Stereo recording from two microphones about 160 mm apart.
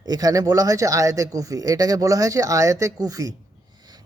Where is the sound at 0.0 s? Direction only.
25° right (ahead or behind).